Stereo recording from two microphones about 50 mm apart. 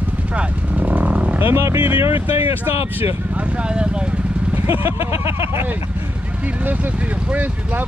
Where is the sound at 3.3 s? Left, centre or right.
Right.